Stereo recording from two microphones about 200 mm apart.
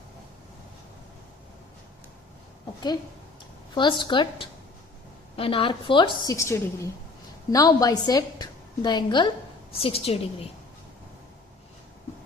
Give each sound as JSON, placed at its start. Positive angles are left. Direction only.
{"t": 3.8, "sound": "a woman's voice", "side_deg": 25}
{"t": 6.2, "sound": "a woman's voice", "side_deg": 15}